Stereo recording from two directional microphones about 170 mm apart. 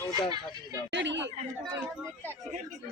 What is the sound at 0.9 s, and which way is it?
Speech, 90° right.